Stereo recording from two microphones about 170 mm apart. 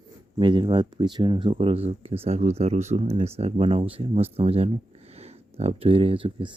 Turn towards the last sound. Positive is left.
turn(degrees=-30)  # may be behind; listen again after turning